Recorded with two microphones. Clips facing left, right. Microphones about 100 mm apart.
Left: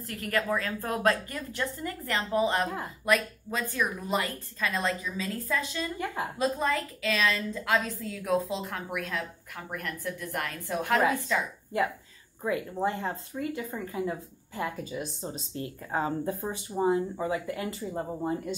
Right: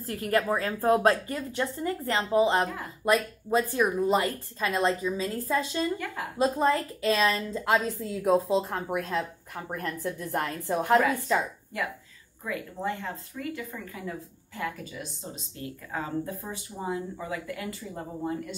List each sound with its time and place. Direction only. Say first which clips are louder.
0.1 s a woman's voice: right 3 dB; 30° right (ahead or behind)
12.4 s speech: left 3 dB; 30° left (ahead or behind)